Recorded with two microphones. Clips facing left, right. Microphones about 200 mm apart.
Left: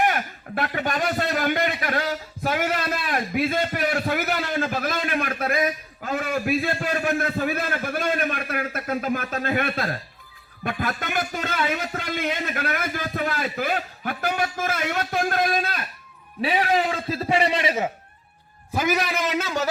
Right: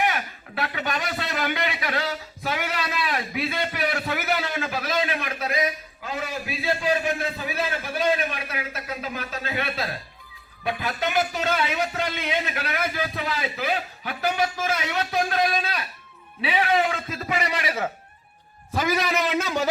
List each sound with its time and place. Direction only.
0.0 s a man's voice: 50° left (ahead or behind); by 17.8 s 25° left (ahead or behind)
18.7 s a man's voice: 10° left (ahead or behind)